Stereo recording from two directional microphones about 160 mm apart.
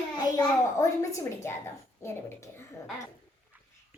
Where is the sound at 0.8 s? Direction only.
20° left (ahead or behind).